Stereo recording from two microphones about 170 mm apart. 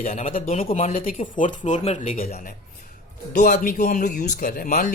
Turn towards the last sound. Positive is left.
turn(degrees=50)  # may be behind; listen again after turning